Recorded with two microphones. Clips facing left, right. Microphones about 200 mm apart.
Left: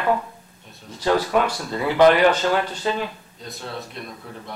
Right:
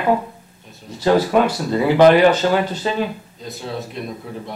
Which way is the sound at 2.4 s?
25° right (ahead or behind).